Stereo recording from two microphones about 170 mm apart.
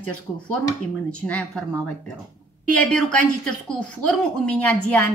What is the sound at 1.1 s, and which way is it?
Speech, 5° left (ahead or behind).